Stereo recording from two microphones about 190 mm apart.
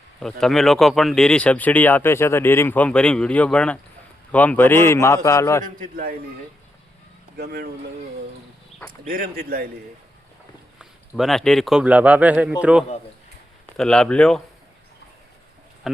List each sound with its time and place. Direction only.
0.2 s a man's voice: centre (ahead or behind)
5.6 s speech: 45° right (ahead or behind)
7.3 s speech: 55° right (ahead or behind)
9.0 s speech: 50° right (ahead or behind)
11.2 s speech: centre (ahead or behind)
13.7 s speech: 5° left (ahead or behind)